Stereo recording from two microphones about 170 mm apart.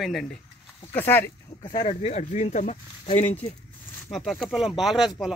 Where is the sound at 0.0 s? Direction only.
Centre (ahead or behind).